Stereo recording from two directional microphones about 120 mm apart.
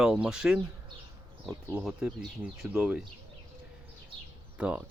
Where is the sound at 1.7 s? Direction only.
10° right (ahead or behind).